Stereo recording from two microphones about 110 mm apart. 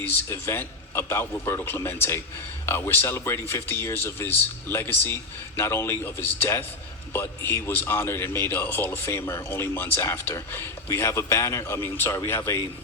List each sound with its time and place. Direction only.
0.0 s a man's voice: 20° left (ahead or behind)